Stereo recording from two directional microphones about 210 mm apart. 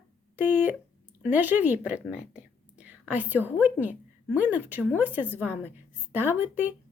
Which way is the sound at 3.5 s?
5° right (ahead or behind).